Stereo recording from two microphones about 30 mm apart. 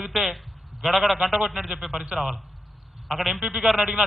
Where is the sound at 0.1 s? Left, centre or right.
Centre.